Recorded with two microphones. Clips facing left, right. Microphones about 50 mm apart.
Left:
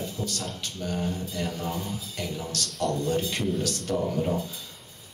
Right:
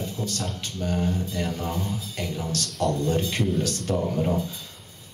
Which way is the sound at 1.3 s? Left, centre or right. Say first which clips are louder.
Right 2 dB; centre.